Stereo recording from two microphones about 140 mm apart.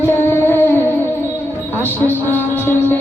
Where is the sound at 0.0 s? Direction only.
15° left (ahead or behind).